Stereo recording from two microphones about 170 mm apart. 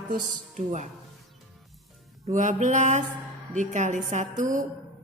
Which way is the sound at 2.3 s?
50° right (ahead or behind).